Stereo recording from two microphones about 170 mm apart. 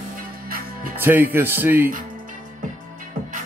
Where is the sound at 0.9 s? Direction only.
10° right (ahead or behind).